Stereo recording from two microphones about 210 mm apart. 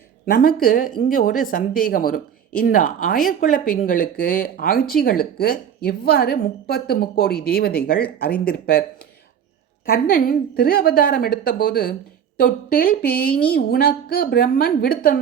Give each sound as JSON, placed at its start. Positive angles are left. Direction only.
{"t": 0.3, "sound": "speech", "side_deg": 45}